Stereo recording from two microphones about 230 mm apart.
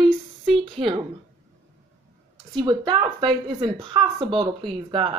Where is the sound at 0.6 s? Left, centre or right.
Right.